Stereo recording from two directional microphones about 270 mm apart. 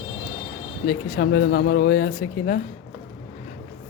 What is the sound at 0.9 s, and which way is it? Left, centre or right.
Speech, left.